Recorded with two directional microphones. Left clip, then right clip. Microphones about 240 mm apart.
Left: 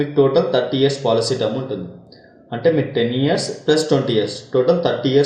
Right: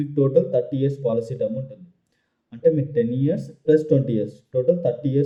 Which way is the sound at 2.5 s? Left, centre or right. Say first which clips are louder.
Left 3 dB; right.